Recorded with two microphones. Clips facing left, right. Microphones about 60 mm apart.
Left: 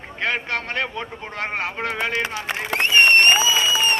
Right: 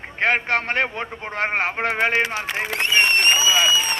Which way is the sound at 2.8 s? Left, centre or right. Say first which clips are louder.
Left 4 dB; left.